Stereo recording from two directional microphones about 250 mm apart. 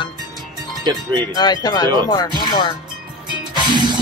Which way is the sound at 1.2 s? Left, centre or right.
Centre.